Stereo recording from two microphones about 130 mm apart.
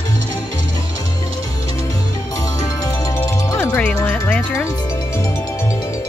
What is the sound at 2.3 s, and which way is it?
Music, 25° left (ahead or behind).